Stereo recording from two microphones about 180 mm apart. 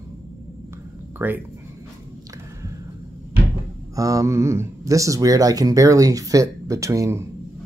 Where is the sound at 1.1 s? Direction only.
10° right (ahead or behind).